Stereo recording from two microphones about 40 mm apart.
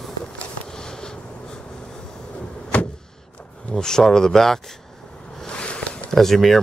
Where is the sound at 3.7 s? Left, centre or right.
Centre.